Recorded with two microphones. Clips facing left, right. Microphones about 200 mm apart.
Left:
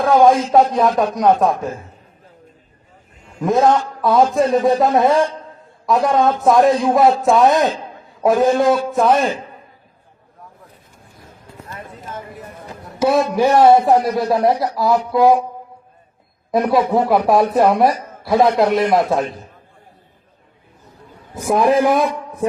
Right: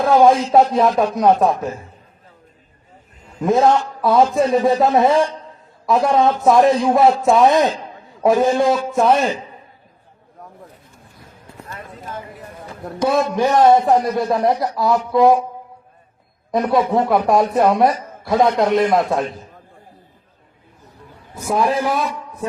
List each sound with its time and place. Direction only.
0.0 s a man's voice: centre (ahead or behind)
3.4 s a man's voice: centre (ahead or behind)
13.3 s a man's voice: 10° left (ahead or behind)
16.5 s a man's voice: 5° left (ahead or behind)
21.3 s a man's voice: 15° left (ahead or behind)